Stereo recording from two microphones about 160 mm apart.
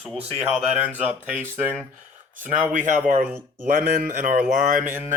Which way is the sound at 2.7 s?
50° right (ahead or behind).